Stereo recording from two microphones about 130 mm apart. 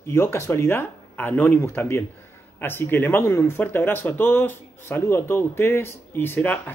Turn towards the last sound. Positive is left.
turn(degrees=15)  # may be behind; listen again after turning